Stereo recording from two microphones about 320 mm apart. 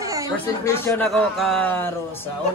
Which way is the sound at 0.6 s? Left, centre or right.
Centre.